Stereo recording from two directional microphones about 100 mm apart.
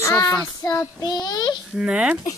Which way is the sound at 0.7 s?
40° left (ahead or behind).